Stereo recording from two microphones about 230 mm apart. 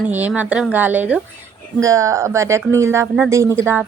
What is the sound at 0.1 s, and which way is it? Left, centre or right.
Speech, centre.